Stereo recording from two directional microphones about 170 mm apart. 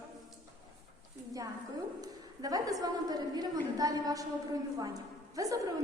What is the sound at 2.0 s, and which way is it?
A woman's voice, 20° right (ahead or behind).